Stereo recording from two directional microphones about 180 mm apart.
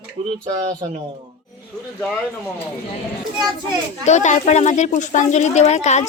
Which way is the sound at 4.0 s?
40° left (ahead or behind).